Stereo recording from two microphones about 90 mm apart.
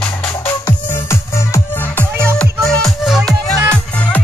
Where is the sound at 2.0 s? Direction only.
25° right (ahead or behind).